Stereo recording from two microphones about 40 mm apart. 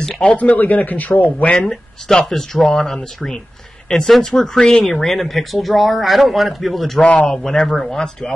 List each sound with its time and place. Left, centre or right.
0.4 s a man's voice: left
1.4 s speech: left
1.7 s speech: centre
7.0 s speech: left
7.2 s speech: centre
7.6 s speech: centre